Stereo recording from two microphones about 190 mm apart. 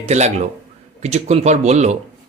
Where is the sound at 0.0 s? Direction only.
35° right (ahead or behind).